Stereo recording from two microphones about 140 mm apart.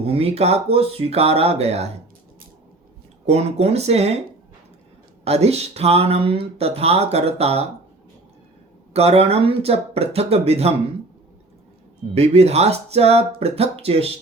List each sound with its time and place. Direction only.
0.0 s speech: 45° right (ahead or behind)
3.2 s speech: 50° right (ahead or behind)
5.2 s speech: 50° right (ahead or behind)
8.9 s speech: 50° right (ahead or behind)
12.1 s speech: 50° right (ahead or behind)